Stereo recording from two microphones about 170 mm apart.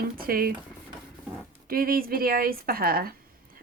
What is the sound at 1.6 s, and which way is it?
A woman's voice, 60° right (ahead or behind).